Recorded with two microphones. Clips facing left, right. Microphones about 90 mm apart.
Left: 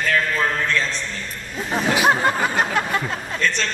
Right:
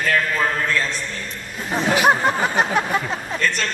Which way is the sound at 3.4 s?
5° right (ahead or behind).